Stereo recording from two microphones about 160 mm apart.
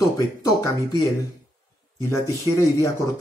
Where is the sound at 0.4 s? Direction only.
20° left (ahead or behind).